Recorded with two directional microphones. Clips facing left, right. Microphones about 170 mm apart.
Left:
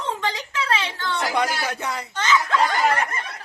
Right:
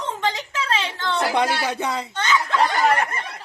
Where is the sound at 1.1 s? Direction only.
25° right (ahead or behind).